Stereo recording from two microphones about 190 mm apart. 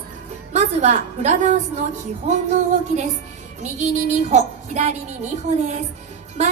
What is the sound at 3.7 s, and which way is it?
A woman's voice, 40° right (ahead or behind).